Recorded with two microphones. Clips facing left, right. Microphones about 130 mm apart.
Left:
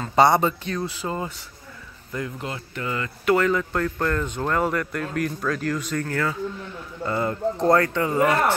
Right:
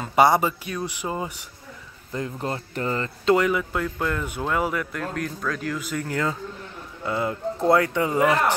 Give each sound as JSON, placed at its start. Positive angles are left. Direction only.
{"t": 0.0, "sound": "speech", "side_deg": -10}
{"t": 2.1, "sound": "speech", "side_deg": -35}
{"t": 3.3, "sound": "speech", "side_deg": -10}
{"t": 6.0, "sound": "a man's voice", "side_deg": -20}
{"t": 7.1, "sound": "speech", "side_deg": -5}